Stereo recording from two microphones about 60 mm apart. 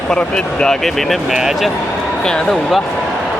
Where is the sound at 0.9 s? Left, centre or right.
Centre.